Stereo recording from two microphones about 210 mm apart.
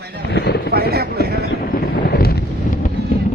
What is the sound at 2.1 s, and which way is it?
Wind noise, 45° left (ahead or behind).